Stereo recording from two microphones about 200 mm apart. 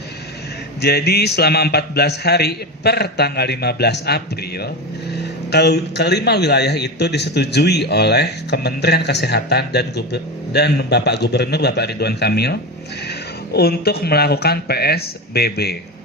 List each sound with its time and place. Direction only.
0.8 s a man's voice: 55° left (ahead or behind)